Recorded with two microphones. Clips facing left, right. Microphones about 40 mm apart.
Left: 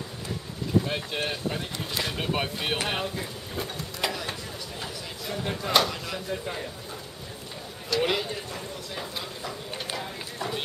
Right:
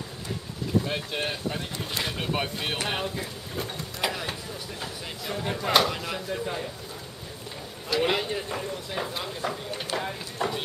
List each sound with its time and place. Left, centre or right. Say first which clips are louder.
0.8 s speech: even; centre
7.9 s speech: right 1 dB; centre